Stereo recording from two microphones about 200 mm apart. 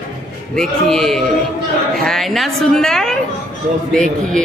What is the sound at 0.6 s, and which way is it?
A woman's voice, centre (ahead or behind).